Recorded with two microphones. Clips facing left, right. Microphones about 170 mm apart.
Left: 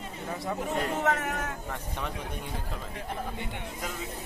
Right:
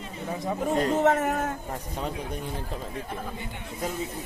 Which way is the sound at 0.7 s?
40° right (ahead or behind).